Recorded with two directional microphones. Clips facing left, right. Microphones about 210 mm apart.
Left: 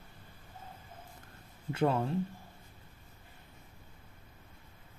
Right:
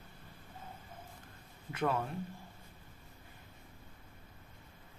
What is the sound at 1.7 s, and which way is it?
Speech, 30° left (ahead or behind).